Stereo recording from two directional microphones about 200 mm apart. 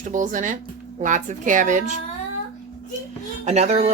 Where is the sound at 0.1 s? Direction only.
40° right (ahead or behind).